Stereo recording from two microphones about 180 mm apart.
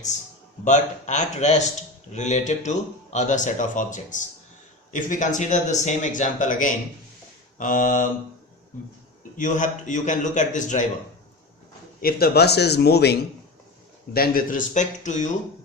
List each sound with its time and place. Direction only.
0.6 s a man's voice: 40° left (ahead or behind)
9.4 s speech: 45° left (ahead or behind)
11.9 s a man's voice: 55° left (ahead or behind)